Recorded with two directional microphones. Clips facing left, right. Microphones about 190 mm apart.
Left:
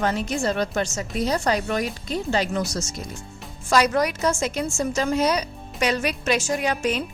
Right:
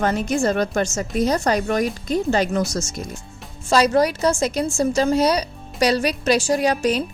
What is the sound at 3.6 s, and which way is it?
A woman's voice, 30° right (ahead or behind).